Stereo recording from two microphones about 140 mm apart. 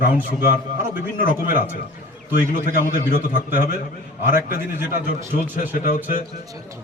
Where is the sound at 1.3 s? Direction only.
85° left.